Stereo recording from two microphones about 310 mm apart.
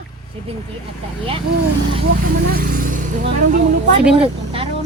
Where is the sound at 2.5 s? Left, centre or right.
Right.